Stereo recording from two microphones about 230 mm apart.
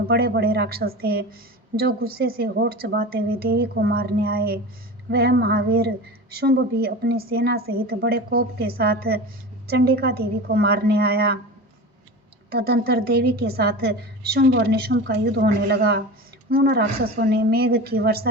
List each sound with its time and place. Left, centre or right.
0.1 s a woman's voice: right
12.5 s a woman's voice: right